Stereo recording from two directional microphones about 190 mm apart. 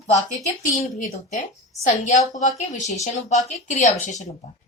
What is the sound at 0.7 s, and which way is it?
A woman's voice, 40° left (ahead or behind).